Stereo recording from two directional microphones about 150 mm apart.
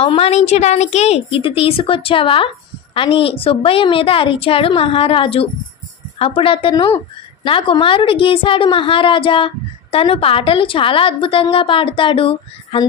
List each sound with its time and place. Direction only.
0.0 s a woman's voice: 40° left (ahead or behind)